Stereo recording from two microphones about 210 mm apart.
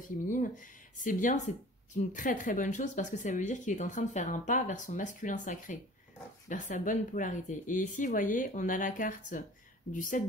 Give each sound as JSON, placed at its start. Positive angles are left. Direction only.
{"t": 0.3, "sound": "speech", "side_deg": 40}